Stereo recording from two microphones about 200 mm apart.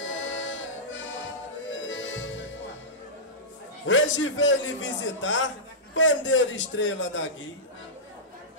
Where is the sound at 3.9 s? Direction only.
70° left (ahead or behind).